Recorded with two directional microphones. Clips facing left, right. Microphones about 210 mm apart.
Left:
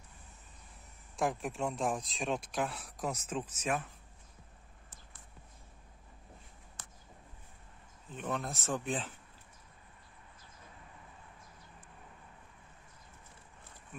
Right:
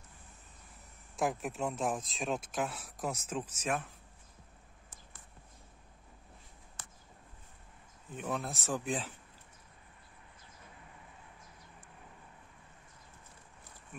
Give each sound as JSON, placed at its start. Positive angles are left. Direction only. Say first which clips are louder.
{"t": 1.1, "sound": "speech", "louder": "even", "side_deg": -5}
{"t": 8.1, "sound": "speech", "louder": "even", "side_deg": -10}